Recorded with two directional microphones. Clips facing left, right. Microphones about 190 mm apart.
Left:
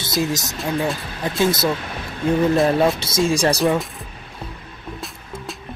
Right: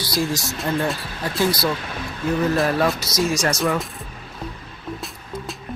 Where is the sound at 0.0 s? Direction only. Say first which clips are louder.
Left 1 dB; 20° left (ahead or behind).